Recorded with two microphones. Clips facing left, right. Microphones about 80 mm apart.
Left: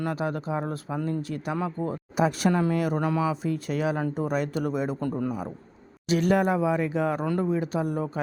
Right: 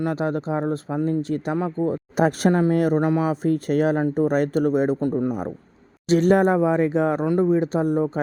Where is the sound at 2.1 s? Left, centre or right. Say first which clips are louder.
Right 4 dB; right.